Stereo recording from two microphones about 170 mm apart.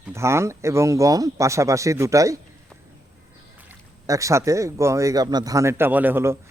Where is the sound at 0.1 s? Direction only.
15° right (ahead or behind).